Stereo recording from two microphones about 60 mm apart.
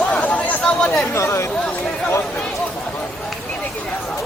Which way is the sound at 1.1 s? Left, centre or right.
Left.